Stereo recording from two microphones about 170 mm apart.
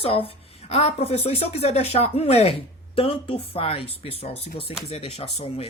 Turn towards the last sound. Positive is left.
turn(degrees=35)  # may be behind; listen again after turning